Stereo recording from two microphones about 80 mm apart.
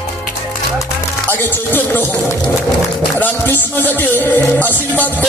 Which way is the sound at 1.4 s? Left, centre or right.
Left.